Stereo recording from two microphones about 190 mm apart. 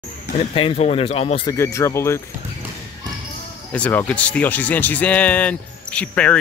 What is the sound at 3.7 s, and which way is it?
Speech, 10° left (ahead or behind).